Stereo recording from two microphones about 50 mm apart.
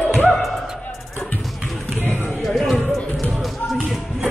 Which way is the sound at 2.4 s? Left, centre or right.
Centre.